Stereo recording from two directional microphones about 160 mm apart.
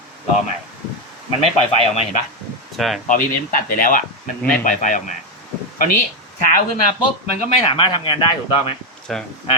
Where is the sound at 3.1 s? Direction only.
55° left (ahead or behind).